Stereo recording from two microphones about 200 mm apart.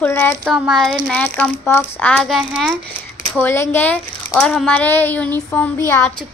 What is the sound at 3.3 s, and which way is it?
Speech, 10° left (ahead or behind).